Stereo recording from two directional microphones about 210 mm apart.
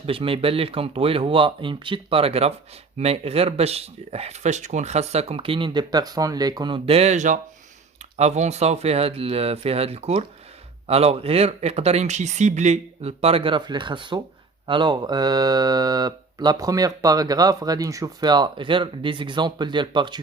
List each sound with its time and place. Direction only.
0.0 s speech: 25° right (ahead or behind)